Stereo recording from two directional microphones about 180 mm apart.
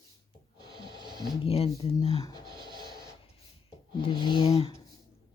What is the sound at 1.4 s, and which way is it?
Speech, 30° left (ahead or behind).